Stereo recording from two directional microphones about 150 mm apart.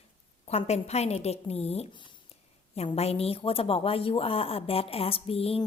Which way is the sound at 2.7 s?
45° left (ahead or behind).